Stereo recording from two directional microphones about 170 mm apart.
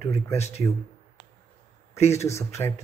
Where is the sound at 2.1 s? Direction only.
15° left (ahead or behind).